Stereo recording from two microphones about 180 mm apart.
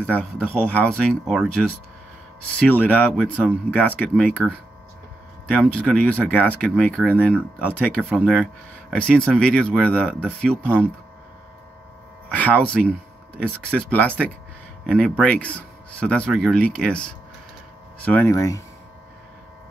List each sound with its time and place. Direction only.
0.0 s speech: 10° left (ahead or behind)
4.4 s speech: 5° right (ahead or behind)
5.5 s speech: 5° left (ahead or behind)
12.3 s speech: 10° left (ahead or behind)